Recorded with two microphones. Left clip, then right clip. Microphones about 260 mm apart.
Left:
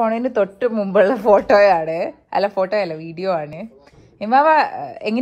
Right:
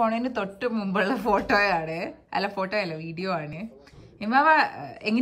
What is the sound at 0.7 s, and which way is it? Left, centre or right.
A woman's voice, centre.